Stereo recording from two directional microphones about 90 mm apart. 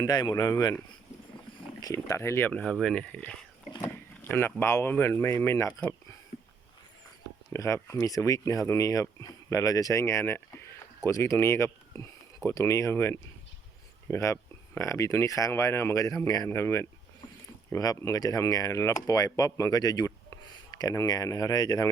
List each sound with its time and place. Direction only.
0.0 s speech: 50° left (ahead or behind)
0.4 s speech: 35° left (ahead or behind)
1.8 s speech: 35° left (ahead or behind)
2.5 s speech: 15° left (ahead or behind)
3.8 s a sound: 25° left (ahead or behind)
4.6 s speech: 25° left (ahead or behind)
7.5 s speech: 30° left (ahead or behind)
17.7 s speech: 40° left (ahead or behind)